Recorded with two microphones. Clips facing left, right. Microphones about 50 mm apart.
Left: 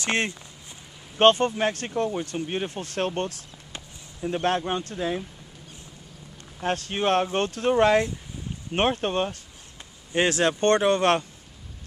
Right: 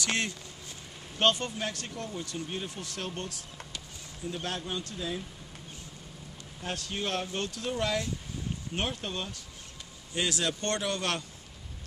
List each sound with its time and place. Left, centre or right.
0.0 s speech: left
6.6 s speech: left